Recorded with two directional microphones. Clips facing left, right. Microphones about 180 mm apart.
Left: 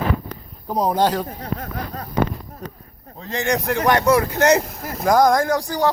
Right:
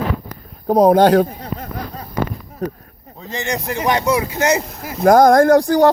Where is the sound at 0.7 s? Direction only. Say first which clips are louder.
Right 8 dB; 60° right (ahead or behind).